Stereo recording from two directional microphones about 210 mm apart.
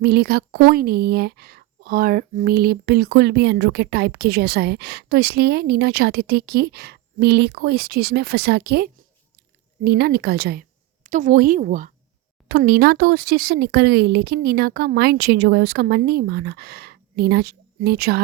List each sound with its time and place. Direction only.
0.0 s a woman's voice: 50° right (ahead or behind)